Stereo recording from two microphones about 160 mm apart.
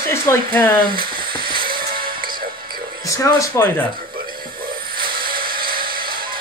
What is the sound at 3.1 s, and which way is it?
Speech, 20° left (ahead or behind).